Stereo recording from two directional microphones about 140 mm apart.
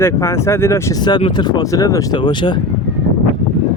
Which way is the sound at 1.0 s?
30° left (ahead or behind).